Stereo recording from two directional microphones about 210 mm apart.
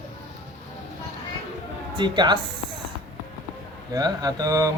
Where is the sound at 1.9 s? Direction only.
20° right (ahead or behind).